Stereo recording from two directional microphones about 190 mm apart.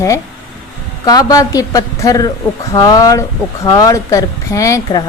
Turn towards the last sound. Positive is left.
turn(degrees=15)  # may be behind; listen again after turning